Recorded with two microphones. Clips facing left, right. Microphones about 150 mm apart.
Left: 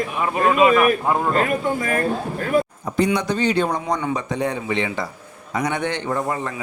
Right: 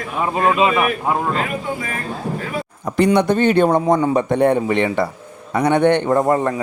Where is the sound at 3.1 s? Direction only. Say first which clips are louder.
Right 6 dB; 55° right (ahead or behind).